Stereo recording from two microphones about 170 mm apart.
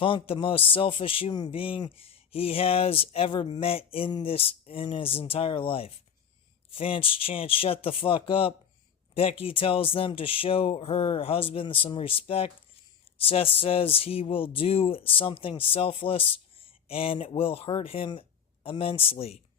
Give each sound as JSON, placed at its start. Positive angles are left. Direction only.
{"t": 0.0, "sound": "speech", "side_deg": 30}